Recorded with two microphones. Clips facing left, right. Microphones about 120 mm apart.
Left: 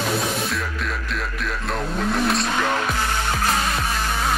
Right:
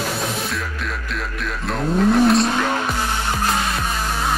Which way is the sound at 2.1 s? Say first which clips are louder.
Right 7 dB; centre (ahead or behind).